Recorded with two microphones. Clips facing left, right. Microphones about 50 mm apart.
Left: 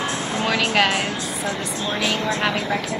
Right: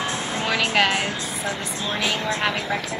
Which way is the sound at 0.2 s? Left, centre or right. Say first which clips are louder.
Left 2 dB; right.